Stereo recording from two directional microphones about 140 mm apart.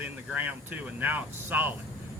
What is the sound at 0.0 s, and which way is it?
Speech, 10° right (ahead or behind).